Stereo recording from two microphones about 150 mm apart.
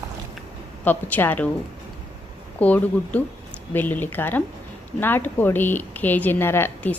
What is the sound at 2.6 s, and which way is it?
A woman's voice, 10° left (ahead or behind).